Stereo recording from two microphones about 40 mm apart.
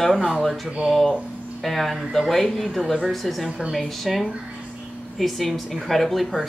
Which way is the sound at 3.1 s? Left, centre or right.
Centre.